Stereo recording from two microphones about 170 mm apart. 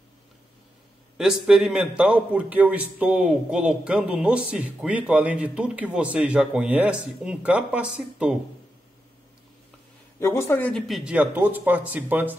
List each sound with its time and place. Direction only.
1.1 s a man's voice: 5° right (ahead or behind)
10.1 s speech: 15° left (ahead or behind)
11.1 s a man's voice: 10° right (ahead or behind)